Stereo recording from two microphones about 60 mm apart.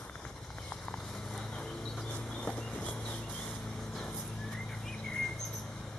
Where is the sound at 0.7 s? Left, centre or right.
Centre.